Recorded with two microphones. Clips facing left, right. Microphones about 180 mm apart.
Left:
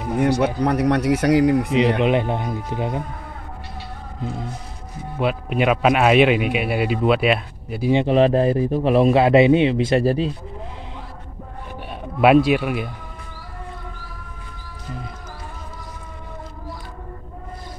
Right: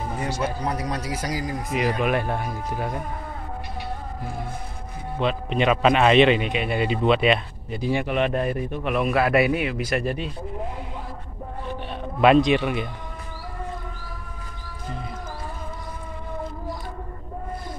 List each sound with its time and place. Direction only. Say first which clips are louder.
0.6 s speech: left 9 dB; 65° left (ahead or behind)
2.0 s a man's voice: left 4 dB; 20° left (ahead or behind)
5.2 s a man's voice: left 2 dB; 10° left (ahead or behind)
7.9 s a man's voice: left 8 dB; 30° left (ahead or behind)
12.2 s a man's voice: left 2 dB; 5° left (ahead or behind)